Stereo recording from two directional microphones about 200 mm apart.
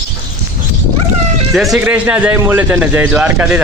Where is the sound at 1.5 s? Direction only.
Centre (ahead or behind).